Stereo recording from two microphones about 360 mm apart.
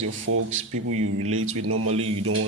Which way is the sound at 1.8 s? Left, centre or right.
Centre.